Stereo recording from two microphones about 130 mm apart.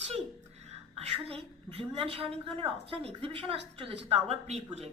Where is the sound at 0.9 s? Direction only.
50° right (ahead or behind).